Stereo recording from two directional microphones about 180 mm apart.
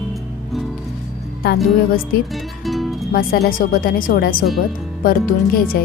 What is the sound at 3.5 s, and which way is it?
Speech, 50° left (ahead or behind).